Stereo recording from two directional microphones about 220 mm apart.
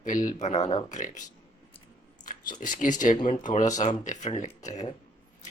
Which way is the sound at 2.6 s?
35° left (ahead or behind).